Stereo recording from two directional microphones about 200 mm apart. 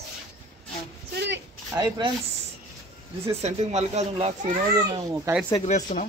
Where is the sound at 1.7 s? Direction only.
20° right (ahead or behind).